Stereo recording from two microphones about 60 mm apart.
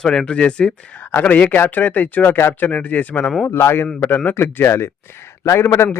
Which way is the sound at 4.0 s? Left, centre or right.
Left.